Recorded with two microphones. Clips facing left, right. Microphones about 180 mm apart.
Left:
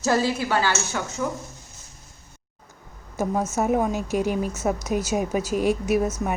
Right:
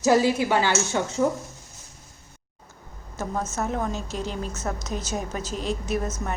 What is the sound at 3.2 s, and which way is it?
A woman's voice, 15° left (ahead or behind).